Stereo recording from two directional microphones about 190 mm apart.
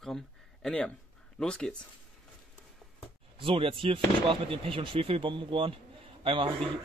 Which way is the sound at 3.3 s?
30° right (ahead or behind).